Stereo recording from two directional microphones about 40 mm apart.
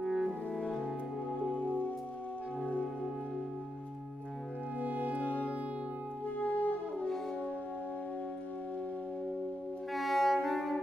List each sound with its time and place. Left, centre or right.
0.0 s music: centre
0.5 s french horn: left
4.7 s music: right
5.2 s music: left
9.9 s music: centre